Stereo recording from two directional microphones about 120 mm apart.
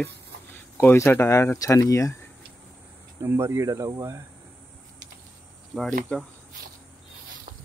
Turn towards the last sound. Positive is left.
turn(degrees=5)  # may be behind; listen again after turning